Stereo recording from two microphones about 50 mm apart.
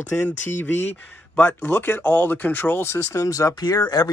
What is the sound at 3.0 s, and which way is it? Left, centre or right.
Speech, left.